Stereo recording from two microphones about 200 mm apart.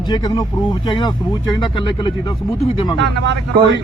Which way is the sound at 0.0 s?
20° left (ahead or behind).